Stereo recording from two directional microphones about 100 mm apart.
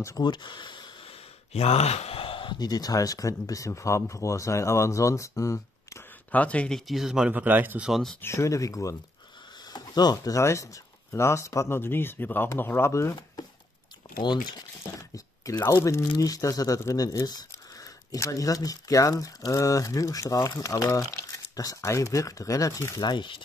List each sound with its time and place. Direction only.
0.2 s speech: 50° left (ahead or behind)
1.0 s a sound: 80° left; by 2.5 s 60° left (ahead or behind)
2.6 s speech: 40° left (ahead or behind)
6.3 s speech: 15° left (ahead or behind)
6.9 s speech: 5° right (ahead or behind)
7.9 s speech: 5° left (ahead or behind)
8.2 s speech: 30° left (ahead or behind)
14.0 s a sound: 55° left (ahead or behind)
14.8 s a sound: 35° left (ahead or behind)
16.2 s speech: 35° left (ahead or behind)
23.0 s speech: 50° left (ahead or behind)